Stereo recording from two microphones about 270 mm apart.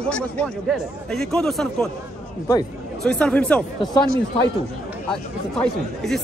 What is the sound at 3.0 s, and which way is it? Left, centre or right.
Speech, centre.